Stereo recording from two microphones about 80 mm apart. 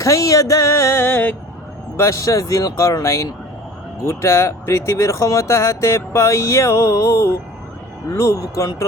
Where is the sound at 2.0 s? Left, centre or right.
Left.